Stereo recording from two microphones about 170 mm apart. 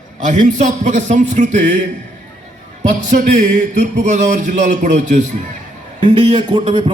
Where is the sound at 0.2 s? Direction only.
45° right (ahead or behind).